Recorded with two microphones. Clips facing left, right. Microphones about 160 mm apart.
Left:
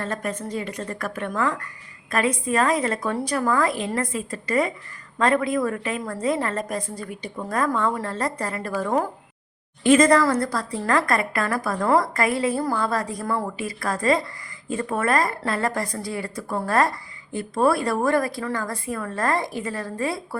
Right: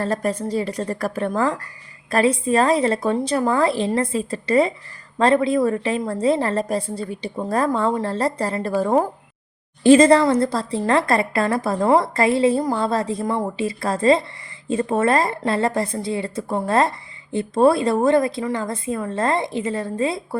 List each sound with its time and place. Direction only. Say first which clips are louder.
0.0 s a woman's voice: right 6 dB; 35° right (ahead or behind)